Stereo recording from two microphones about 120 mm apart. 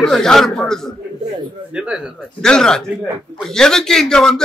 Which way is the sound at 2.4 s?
5° left (ahead or behind).